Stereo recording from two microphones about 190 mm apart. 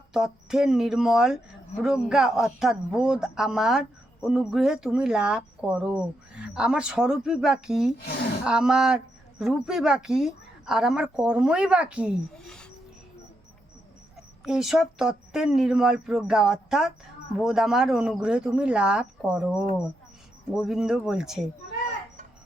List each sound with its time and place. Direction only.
0.1 s speech: 5° right (ahead or behind)
8.0 s a woman's voice: 55° left (ahead or behind)
8.4 s speech: 5° right (ahead or behind)
14.4 s speech: centre (ahead or behind)